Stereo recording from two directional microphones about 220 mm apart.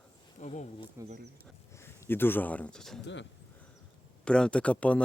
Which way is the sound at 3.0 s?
55° left (ahead or behind).